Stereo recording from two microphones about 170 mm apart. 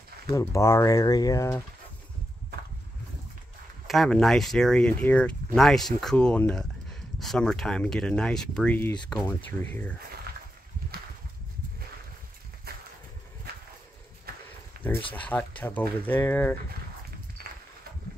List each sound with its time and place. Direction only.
0.3 s speech: 20° left (ahead or behind)
3.8 s speech: centre (ahead or behind)
12.7 s a sound: 65° right (ahead or behind)
14.3 s horse: 65° right (ahead or behind)
14.8 s speech: 10° left (ahead or behind)
17.4 s a sound: 60° right (ahead or behind)